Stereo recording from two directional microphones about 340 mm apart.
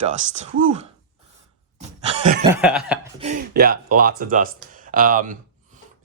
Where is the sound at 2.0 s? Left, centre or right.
Centre.